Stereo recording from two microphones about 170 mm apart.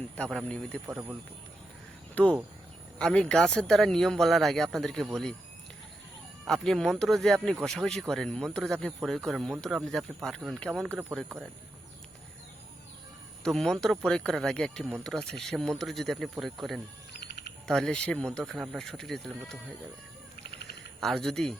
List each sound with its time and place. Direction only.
0.2 s speech: 5° left (ahead or behind)
0.9 s speech: 10° right (ahead or behind)
2.2 s speech: 10° left (ahead or behind)
6.4 s speech: centre (ahead or behind)
13.4 s speech: centre (ahead or behind)
17.1 s a sound: 75° left (ahead or behind)
17.7 s speech: centre (ahead or behind)
21.0 s speech: centre (ahead or behind)